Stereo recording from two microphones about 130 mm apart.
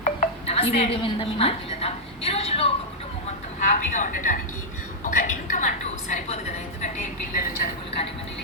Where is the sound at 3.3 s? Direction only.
70° left (ahead or behind); by 7.7 s 90° left.